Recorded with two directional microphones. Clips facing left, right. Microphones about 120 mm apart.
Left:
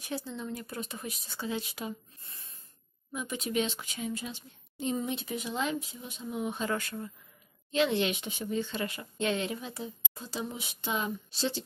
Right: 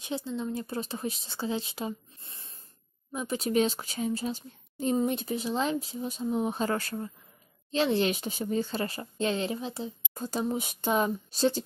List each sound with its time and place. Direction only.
0.0 s a woman's voice: 20° right (ahead or behind)
10.1 s speech: 45° right (ahead or behind)